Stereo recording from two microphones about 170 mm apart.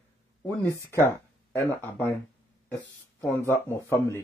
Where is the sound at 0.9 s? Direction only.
15° left (ahead or behind).